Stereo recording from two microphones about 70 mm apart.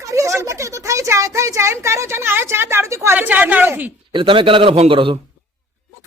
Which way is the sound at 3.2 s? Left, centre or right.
Right.